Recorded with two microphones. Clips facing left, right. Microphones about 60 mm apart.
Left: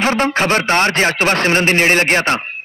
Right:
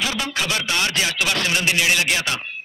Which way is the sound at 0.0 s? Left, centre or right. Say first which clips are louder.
Left 9 dB; left.